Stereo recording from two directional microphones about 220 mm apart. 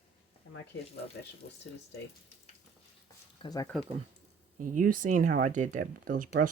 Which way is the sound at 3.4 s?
15° left (ahead or behind).